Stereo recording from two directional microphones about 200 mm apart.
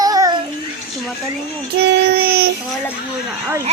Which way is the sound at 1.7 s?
50° right (ahead or behind).